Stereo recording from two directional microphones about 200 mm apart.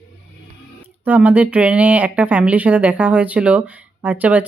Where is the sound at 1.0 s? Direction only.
10° right (ahead or behind).